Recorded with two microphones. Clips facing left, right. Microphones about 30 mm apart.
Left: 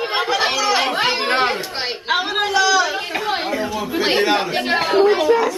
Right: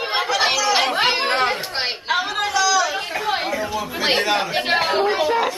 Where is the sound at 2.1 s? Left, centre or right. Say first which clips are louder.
Left 3 dB; left.